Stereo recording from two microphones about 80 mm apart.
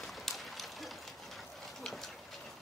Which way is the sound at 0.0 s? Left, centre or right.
Centre.